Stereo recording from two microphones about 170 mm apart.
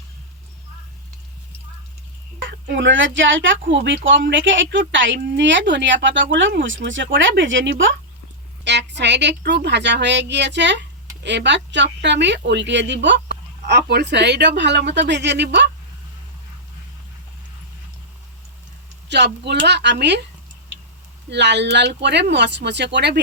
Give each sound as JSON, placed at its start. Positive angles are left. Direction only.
{"t": 2.4, "sound": "speech", "side_deg": -90}
{"t": 19.0, "sound": "speech", "side_deg": -90}
{"t": 21.2, "sound": "speech", "side_deg": -90}